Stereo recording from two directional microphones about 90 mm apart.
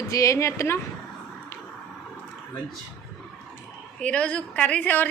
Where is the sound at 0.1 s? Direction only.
35° left (ahead or behind).